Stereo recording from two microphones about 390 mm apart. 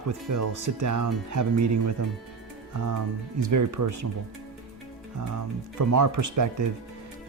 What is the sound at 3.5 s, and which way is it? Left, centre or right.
Speech, right.